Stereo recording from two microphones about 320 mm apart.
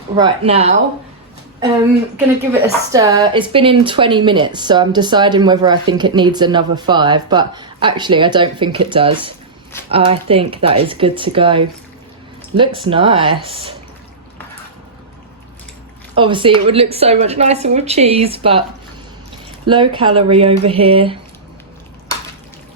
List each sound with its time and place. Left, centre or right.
0.2 s a woman's voice: centre
2.1 s a woman's voice: centre
16.1 s a woman's voice: centre
19.6 s a woman's voice: centre